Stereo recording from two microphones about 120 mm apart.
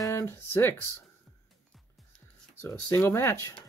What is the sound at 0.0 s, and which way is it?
Speech, 25° left (ahead or behind).